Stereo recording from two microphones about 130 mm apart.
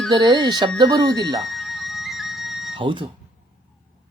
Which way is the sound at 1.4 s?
Centre (ahead or behind).